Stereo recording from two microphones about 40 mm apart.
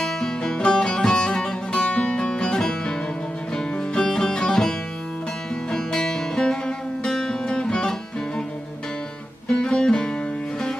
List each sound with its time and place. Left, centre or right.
0.0 s music: centre
5.7 s music: centre
9.5 s music: centre